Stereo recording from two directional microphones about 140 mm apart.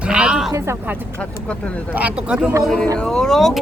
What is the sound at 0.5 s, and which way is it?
A woman's voice, 20° right (ahead or behind).